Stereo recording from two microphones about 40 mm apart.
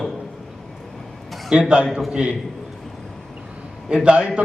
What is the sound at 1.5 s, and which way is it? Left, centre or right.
Speech, right.